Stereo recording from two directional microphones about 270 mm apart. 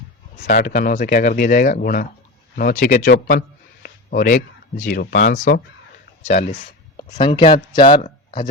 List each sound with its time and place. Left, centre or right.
0.4 s speech: left
6.2 s speech: left
8.0 s a sound: centre